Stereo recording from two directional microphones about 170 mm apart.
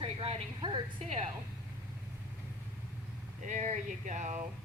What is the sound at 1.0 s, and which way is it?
Speech, 40° right (ahead or behind).